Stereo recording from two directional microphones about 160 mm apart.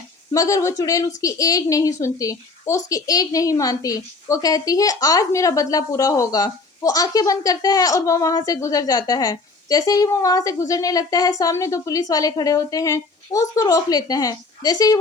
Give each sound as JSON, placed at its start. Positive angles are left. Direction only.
{"t": 0.3, "sound": "a woman's voice", "side_deg": 20}